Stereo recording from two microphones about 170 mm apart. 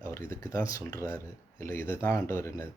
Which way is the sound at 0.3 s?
15° left (ahead or behind).